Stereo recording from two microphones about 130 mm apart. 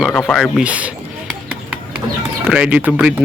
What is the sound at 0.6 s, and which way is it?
Speech, 10° right (ahead or behind).